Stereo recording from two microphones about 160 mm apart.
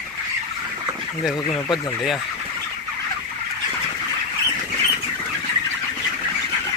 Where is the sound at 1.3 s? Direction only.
30° left (ahead or behind).